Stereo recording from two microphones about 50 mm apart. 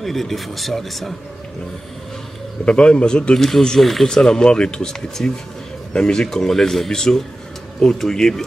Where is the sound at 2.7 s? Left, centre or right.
Left.